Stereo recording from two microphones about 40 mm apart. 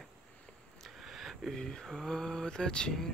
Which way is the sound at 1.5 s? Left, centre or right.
Centre.